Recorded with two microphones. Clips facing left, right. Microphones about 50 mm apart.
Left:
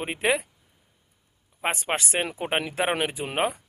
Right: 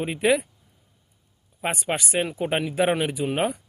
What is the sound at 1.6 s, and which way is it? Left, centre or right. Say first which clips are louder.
Speech: even; left.